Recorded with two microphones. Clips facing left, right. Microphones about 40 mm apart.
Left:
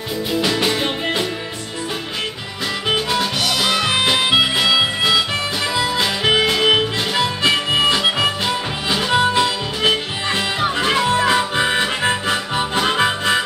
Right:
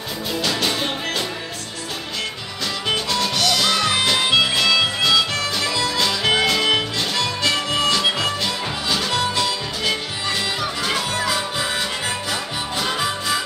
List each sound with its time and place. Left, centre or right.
0.4 s music: left
2.9 s music: centre; by 13.4 s left